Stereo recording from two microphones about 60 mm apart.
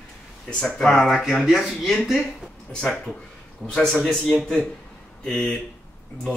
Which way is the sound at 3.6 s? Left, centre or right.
Centre.